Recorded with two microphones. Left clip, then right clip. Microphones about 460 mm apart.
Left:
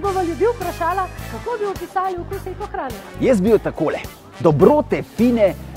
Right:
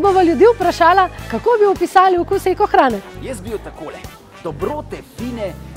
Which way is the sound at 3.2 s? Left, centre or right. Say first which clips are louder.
Left 11 dB; left.